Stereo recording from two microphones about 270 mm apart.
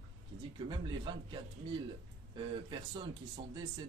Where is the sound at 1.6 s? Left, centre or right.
Centre.